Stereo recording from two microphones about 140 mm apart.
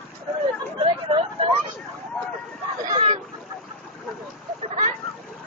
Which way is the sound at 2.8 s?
40° right (ahead or behind).